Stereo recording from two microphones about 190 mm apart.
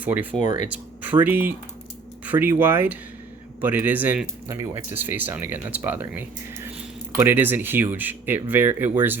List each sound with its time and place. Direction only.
0.0 s speech: 10° right (ahead or behind)
0.3 s speech: 40° left (ahead or behind)
1.0 s speech: 10° right (ahead or behind)